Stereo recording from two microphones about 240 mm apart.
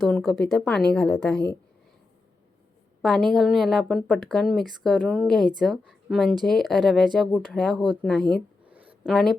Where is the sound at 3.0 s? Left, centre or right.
Centre.